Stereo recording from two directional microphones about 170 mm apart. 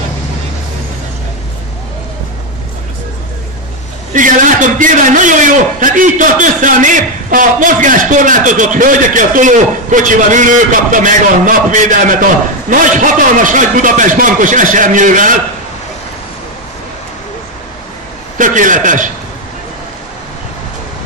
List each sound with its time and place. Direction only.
4.1 s a man's voice: 50° right (ahead or behind)
18.4 s a man's voice: 50° right (ahead or behind)